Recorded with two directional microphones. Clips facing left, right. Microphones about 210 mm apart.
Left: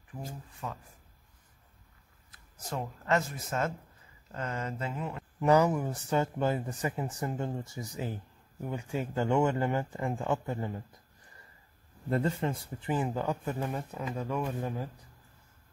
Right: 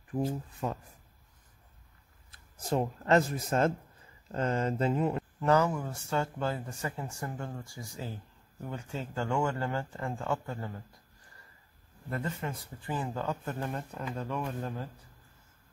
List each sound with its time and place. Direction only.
0.6 s speech: 40° right (ahead or behind)
2.7 s speech: 35° right (ahead or behind)
5.4 s speech: 15° left (ahead or behind)
12.1 s speech: 30° left (ahead or behind); by 14.9 s 10° left (ahead or behind)